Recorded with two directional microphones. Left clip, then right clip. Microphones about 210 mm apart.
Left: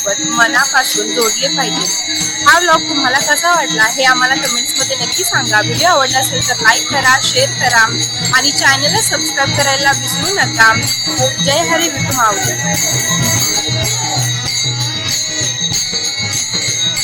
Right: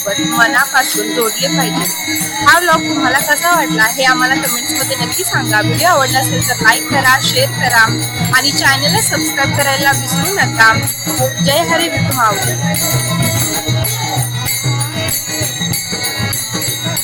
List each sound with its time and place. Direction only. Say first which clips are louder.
0.3 s speech: even; centre (ahead or behind)